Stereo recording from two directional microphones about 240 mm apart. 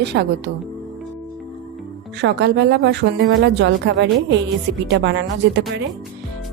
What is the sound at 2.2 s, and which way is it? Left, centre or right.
A woman's voice, right.